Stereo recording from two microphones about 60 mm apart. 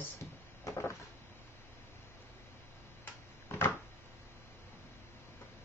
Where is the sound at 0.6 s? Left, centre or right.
Left.